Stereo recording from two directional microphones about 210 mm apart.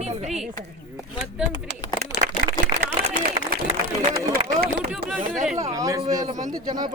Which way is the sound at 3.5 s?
45° right (ahead or behind).